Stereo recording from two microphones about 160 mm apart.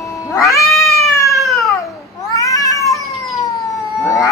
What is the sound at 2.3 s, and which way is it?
Cat, 20° left (ahead or behind).